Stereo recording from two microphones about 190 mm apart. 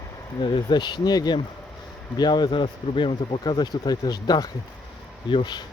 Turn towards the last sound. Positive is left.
turn(degrees=25)  # may be behind; listen again after turning